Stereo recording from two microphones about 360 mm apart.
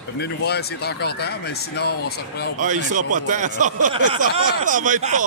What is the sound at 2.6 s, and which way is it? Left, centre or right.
Speech, right.